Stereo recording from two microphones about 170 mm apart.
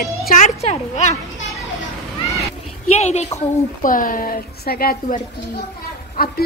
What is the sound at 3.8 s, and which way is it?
A woman's voice, 55° left (ahead or behind).